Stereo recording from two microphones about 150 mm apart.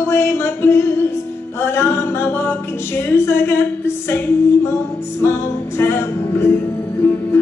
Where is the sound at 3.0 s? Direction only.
15° left (ahead or behind).